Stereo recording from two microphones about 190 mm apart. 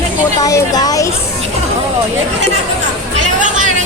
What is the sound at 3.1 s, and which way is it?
Chatter, 40° right (ahead or behind).